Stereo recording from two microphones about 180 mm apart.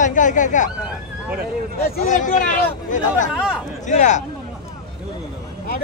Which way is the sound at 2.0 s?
45° left (ahead or behind).